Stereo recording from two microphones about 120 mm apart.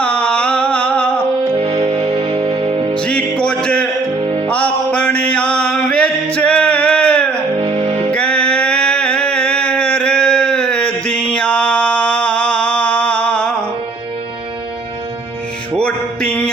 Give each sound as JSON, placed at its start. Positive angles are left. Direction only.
{"t": 0.0, "sound": "a sound", "side_deg": 10}
{"t": 1.5, "sound": "music", "side_deg": -50}
{"t": 3.0, "sound": "music", "side_deg": 10}
{"t": 4.2, "sound": "music", "side_deg": -45}
{"t": 4.4, "sound": "music", "side_deg": 10}
{"t": 7.6, "sound": "music", "side_deg": -50}
{"t": 8.1, "sound": "music", "side_deg": 10}
{"t": 11.0, "sound": "mantra", "side_deg": 10}
{"t": 15.8, "sound": "music", "side_deg": 10}